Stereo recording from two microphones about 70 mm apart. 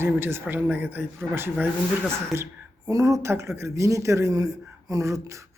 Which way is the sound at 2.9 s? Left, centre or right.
Right.